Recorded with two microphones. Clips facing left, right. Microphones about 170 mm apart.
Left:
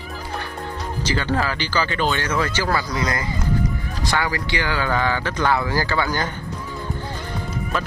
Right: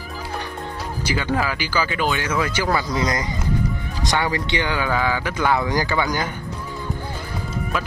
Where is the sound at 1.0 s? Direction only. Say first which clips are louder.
Even; 10° right (ahead or behind).